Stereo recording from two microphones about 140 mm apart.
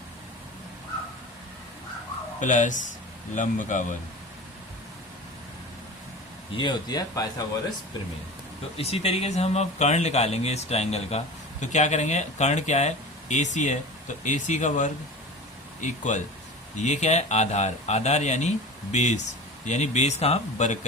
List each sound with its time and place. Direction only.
2.4 s speech: 60° left (ahead or behind)
6.5 s speech: 35° left (ahead or behind)
8.8 s speech: 45° left (ahead or behind)